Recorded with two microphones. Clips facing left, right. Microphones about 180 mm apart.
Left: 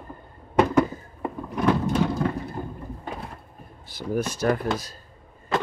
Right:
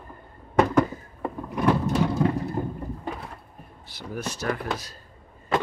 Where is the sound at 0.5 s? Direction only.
10° left (ahead or behind).